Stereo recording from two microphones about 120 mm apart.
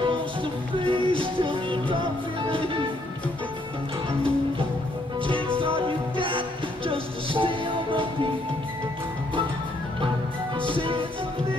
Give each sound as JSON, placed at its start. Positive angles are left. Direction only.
{"t": 0.7, "sound": "music", "side_deg": -45}
{"t": 5.2, "sound": "music", "side_deg": -45}
{"t": 10.6, "sound": "music", "side_deg": -45}